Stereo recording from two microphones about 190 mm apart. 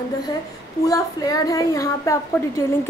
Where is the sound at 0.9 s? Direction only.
20° left (ahead or behind).